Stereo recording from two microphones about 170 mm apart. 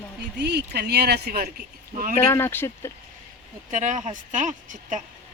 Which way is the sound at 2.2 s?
15° left (ahead or behind).